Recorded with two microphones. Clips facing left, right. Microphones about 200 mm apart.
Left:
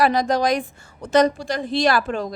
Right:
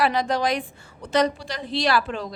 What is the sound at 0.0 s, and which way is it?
A woman's voice, 45° left (ahead or behind).